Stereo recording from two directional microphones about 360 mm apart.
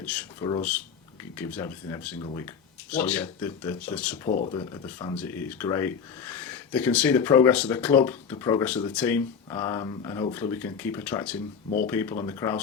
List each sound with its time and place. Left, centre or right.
0.0 s speech: centre
4.3 s speech: left
4.5 s speech: centre